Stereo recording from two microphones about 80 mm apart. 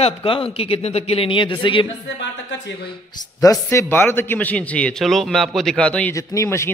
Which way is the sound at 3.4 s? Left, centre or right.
Left.